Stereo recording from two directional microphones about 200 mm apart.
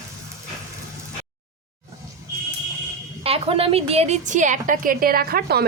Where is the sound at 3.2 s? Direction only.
30° right (ahead or behind); by 5.7 s 50° right (ahead or behind).